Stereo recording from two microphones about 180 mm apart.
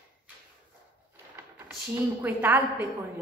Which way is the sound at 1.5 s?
10° right (ahead or behind).